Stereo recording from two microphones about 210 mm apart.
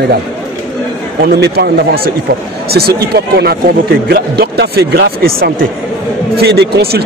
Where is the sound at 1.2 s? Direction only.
50° right (ahead or behind).